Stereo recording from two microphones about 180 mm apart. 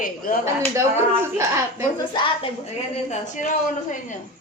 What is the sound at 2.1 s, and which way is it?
Speech, 30° left (ahead or behind).